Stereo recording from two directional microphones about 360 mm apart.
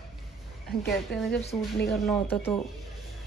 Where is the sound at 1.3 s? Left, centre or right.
Left.